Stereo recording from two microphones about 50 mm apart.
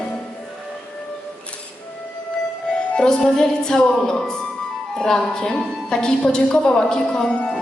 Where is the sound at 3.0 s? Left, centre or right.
Centre.